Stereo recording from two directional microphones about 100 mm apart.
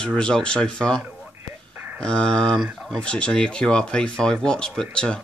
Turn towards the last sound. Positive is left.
turn(degrees=10)  # may be behind; listen again after turning